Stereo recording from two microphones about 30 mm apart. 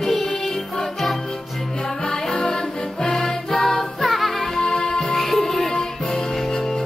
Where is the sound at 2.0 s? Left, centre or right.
Centre.